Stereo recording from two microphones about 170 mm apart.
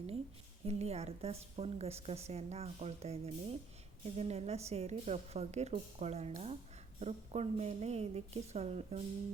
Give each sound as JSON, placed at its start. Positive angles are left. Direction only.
{"t": 0.6, "sound": "a woman's voice", "side_deg": -35}